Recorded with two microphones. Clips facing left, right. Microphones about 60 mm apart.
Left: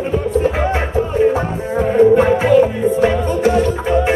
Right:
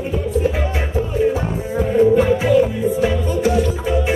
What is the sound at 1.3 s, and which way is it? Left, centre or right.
Music, left.